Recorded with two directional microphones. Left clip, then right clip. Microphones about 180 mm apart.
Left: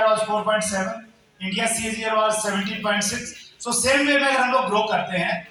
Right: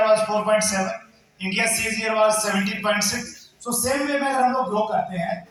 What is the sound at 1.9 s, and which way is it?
A man's voice, 15° left (ahead or behind).